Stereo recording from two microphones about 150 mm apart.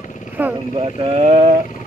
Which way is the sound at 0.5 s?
30° right (ahead or behind).